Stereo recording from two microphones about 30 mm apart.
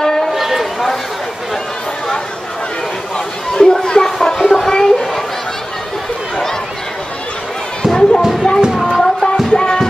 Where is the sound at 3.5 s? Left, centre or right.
Left.